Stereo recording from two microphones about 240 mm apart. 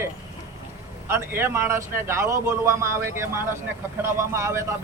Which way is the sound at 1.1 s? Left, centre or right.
Centre.